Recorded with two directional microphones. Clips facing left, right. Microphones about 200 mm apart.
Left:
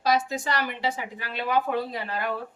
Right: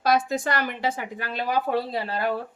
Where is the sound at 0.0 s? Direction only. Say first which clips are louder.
Right 2 dB; 55° right (ahead or behind); by 2.3 s 35° right (ahead or behind).